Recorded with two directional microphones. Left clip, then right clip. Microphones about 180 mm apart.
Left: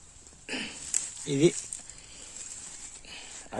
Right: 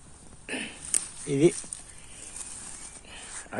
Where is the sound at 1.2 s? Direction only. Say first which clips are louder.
Right 2 dB; 35° left (ahead or behind).